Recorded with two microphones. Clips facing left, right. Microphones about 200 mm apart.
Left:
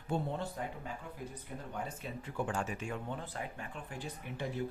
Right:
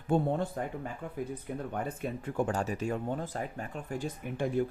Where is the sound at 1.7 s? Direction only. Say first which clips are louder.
Right 4 dB; 55° right (ahead or behind).